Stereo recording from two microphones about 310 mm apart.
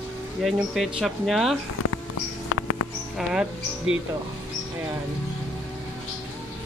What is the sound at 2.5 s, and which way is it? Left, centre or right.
Mouse, left.